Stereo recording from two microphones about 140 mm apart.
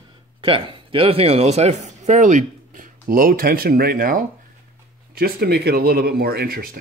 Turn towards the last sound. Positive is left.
turn(degrees=-90)